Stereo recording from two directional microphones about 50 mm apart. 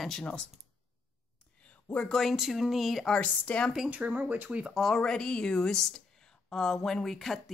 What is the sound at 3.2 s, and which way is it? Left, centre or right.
Speech, left.